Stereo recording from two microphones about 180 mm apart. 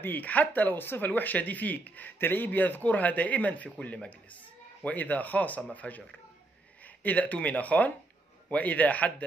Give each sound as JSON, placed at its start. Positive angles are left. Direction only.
{"t": 0.0, "sound": "speech", "side_deg": 10}